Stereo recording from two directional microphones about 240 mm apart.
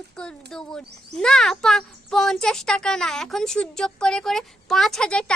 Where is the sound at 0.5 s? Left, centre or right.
Centre.